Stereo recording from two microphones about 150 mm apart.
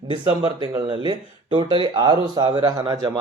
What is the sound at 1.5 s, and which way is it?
Speech, 35° right (ahead or behind).